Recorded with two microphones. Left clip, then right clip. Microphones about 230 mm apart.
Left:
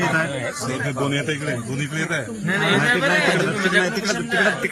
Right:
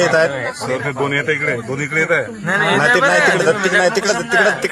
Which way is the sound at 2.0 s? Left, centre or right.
Right.